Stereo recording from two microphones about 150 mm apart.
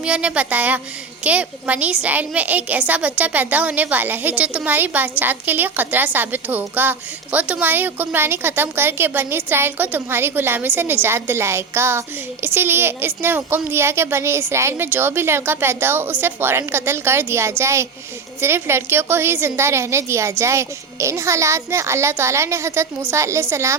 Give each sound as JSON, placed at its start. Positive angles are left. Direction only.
{"t": 0.0, "sound": "a woman's voice", "side_deg": -10}